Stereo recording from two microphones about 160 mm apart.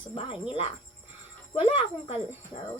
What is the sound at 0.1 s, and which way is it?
Speech, 35° left (ahead or behind).